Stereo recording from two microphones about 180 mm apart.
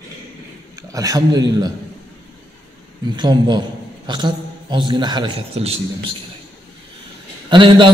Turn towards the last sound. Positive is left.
turn(degrees=-25)  # may be behind; listen again after turning